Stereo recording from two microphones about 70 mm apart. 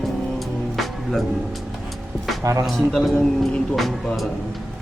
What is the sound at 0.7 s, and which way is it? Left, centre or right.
Music, centre.